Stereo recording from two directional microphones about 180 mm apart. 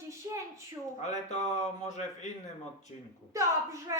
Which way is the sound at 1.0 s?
40° left (ahead or behind).